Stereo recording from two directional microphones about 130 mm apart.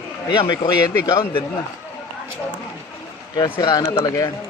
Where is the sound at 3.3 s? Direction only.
35° left (ahead or behind).